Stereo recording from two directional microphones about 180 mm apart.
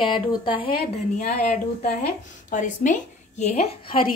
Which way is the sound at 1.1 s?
50° left (ahead or behind).